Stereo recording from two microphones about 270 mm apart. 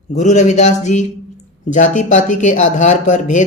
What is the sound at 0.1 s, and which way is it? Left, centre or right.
Speech, left.